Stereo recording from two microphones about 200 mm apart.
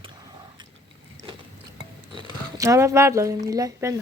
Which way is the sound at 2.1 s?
20° right (ahead or behind).